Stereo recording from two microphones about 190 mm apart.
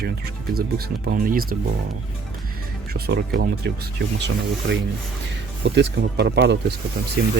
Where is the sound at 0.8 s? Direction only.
50° right (ahead or behind).